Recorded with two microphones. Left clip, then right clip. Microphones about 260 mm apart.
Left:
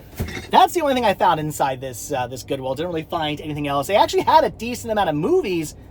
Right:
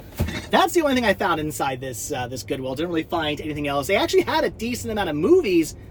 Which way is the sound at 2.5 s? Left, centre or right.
Centre.